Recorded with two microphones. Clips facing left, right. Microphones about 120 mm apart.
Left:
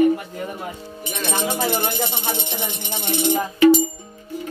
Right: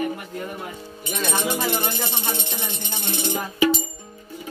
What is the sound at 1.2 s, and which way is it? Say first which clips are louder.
Music: left 2 dB; 25° left (ahead or behind).